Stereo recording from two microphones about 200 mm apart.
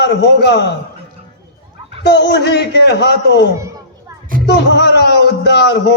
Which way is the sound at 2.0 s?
60° left (ahead or behind).